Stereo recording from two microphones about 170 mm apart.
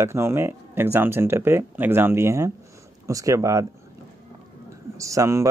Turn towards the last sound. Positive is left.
turn(degrees=-15)  # may be behind; listen again after turning